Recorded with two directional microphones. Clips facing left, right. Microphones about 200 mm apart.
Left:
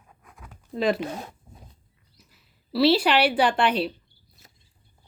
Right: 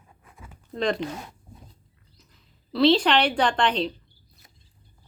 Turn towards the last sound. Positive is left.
turn(degrees=10)  # may be behind; listen again after turning